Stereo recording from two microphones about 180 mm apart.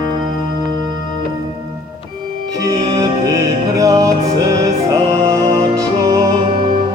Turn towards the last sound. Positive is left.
turn(degrees=-20)  # may be behind; listen again after turning